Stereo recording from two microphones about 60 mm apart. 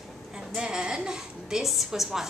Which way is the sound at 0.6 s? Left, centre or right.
Centre.